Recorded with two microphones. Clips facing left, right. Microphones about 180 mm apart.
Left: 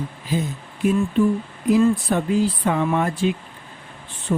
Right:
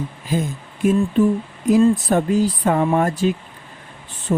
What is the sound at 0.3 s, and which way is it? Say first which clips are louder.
Speech: right 2 dB; 45° right (ahead or behind).